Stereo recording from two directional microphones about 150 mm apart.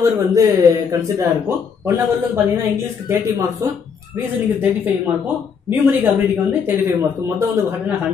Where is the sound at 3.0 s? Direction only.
20° right (ahead or behind).